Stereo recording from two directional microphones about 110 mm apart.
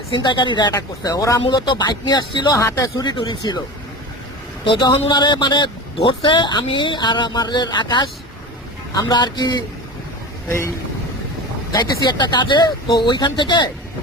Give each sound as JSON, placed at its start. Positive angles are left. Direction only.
{"t": 0.1, "sound": "speech", "side_deg": 45}
{"t": 4.6, "sound": "speech", "side_deg": 50}
{"t": 11.7, "sound": "speech", "side_deg": 40}